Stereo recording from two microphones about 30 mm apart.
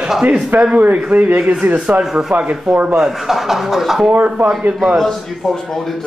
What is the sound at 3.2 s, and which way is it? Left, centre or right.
Speech, centre.